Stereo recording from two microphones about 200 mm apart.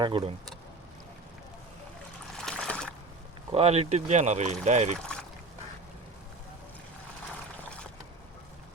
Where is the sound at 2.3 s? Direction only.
5° left (ahead or behind).